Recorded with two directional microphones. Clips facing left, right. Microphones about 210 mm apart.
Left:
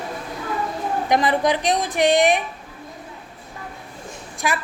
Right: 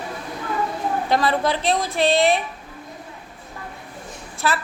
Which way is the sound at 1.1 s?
15° left (ahead or behind).